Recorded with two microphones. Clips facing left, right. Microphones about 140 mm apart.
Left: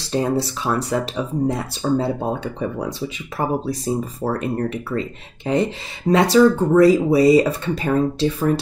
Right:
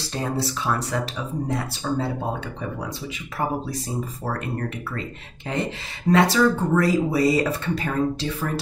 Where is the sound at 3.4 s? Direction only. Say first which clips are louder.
Left 4 dB; 40° left (ahead or behind).